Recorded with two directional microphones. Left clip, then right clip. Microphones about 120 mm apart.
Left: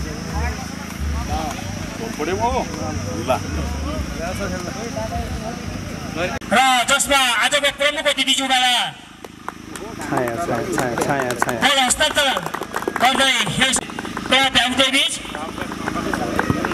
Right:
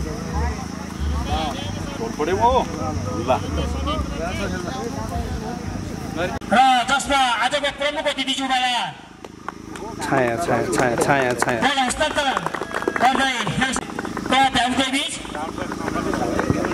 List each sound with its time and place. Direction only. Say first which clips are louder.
2.1 s speech: right 3 dB; 15° left (ahead or behind)
6.1 s a man's voice: even; 15° left (ahead or behind)
10.1 s speech: right 2 dB; 15° right (ahead or behind)
11.2 s a man's voice: left 1 dB; 15° left (ahead or behind)
16.1 s a sound: left 1 dB; 20° left (ahead or behind)